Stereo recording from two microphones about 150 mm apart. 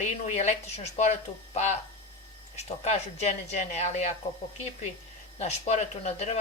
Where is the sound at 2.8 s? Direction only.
45° left (ahead or behind).